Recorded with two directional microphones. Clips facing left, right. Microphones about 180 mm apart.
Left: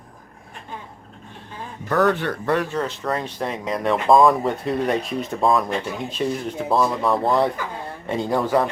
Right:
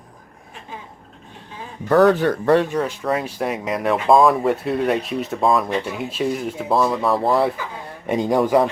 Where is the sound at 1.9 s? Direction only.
35° right (ahead or behind).